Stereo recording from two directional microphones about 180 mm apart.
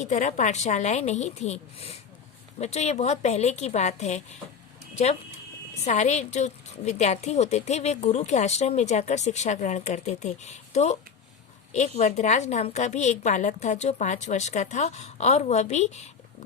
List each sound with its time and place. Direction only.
0.0 s a woman's voice: 40° left (ahead or behind)
5.8 s a woman's voice: 40° left (ahead or behind)